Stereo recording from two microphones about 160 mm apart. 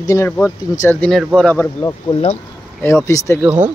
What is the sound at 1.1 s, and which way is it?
Speech, 5° left (ahead or behind).